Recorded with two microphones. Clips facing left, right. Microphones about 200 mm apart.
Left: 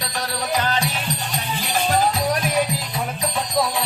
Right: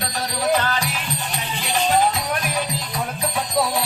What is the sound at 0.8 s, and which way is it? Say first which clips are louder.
Music: left 2 dB; 30° left (ahead or behind).